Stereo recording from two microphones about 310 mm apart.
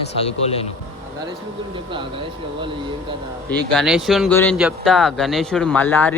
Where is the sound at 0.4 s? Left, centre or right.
Centre.